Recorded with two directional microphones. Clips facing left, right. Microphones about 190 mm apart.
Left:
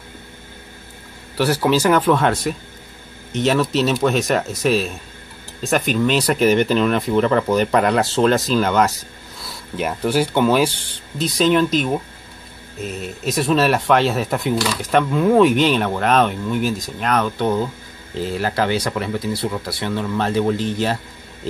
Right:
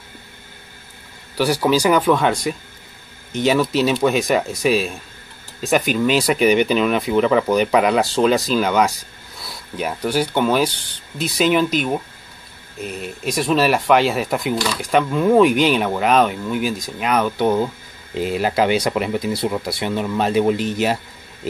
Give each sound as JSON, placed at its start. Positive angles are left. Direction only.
{"t": 1.3, "sound": "speech", "side_deg": 0}